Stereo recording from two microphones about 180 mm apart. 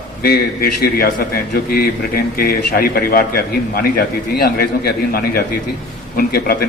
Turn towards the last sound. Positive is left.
turn(degrees=55)  # may be behind; listen again after turning